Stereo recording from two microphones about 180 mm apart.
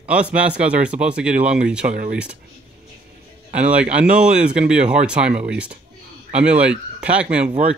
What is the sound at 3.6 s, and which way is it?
Speech, 5° right (ahead or behind).